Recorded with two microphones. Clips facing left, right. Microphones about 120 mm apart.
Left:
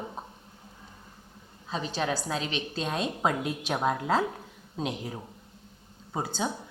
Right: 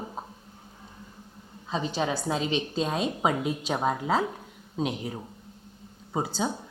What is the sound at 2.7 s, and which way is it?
A woman's voice, 5° right (ahead or behind).